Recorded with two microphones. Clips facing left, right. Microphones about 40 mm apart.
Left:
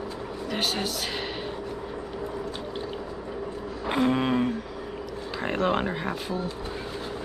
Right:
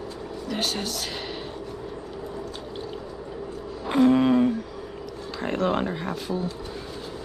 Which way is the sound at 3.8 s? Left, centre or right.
Centre.